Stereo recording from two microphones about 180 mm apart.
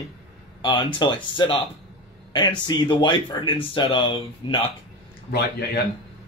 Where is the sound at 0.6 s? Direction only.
25° left (ahead or behind).